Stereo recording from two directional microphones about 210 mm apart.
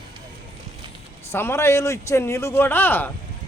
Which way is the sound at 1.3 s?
10° left (ahead or behind).